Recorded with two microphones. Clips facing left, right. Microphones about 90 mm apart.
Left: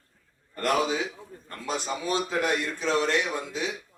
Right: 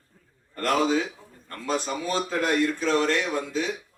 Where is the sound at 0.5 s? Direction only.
20° left (ahead or behind).